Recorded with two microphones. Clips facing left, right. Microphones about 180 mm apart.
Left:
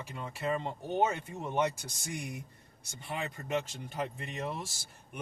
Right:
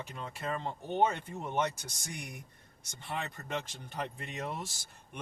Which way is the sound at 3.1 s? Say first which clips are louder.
Left 3 dB; 15° left (ahead or behind).